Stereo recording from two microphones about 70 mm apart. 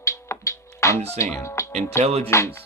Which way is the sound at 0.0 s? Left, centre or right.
Left.